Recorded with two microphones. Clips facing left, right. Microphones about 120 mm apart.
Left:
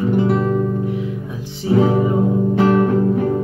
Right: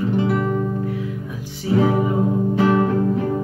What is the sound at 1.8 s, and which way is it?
Music, 25° left (ahead or behind).